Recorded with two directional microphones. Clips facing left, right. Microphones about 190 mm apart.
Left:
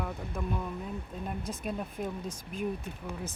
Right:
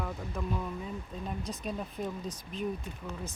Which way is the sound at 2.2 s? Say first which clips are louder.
Left 1 dB; 50° left (ahead or behind).